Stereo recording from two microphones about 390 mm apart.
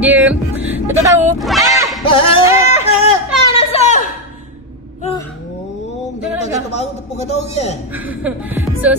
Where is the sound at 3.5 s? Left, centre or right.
Centre.